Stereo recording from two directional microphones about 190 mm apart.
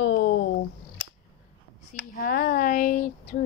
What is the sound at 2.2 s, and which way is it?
Speech, 50° left (ahead or behind).